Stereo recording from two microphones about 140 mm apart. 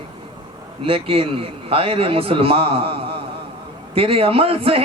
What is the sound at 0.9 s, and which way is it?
Speech, 40° right (ahead or behind).